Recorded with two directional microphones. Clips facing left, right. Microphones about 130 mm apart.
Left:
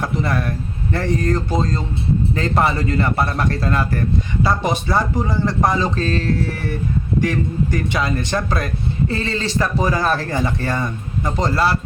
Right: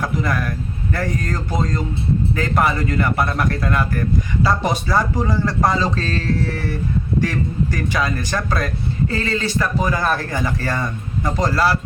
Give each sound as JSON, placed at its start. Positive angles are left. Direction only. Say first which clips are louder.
{"t": 0.0, "sound": "a man's voice", "louder": "left 1 dB", "side_deg": 30}